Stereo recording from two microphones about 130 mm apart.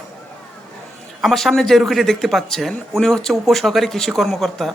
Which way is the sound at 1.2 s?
Centre (ahead or behind).